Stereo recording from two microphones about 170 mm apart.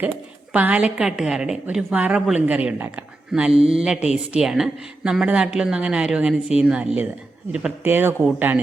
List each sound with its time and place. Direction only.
0.5 s a woman's voice: 10° right (ahead or behind)
3.5 s mantra: 35° right (ahead or behind)
3.8 s a woman's voice: 5° right (ahead or behind)